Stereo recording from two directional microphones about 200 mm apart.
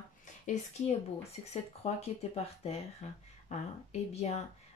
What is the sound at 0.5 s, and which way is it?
Speech, 30° left (ahead or behind).